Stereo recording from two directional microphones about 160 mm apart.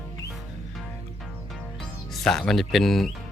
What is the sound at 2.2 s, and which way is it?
Speech, 5° left (ahead or behind).